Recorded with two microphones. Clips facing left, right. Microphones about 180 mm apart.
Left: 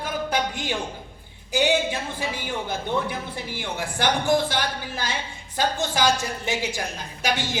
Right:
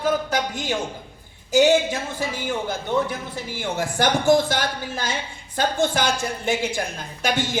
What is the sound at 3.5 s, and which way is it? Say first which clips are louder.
A man's voice: right 6 dB; 45° right (ahead or behind).